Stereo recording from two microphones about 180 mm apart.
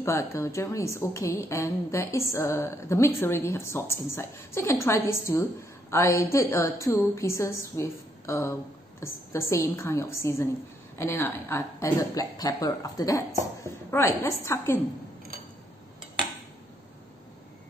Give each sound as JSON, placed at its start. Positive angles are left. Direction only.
{"t": 0.0, "sound": "a woman's voice", "side_deg": 15}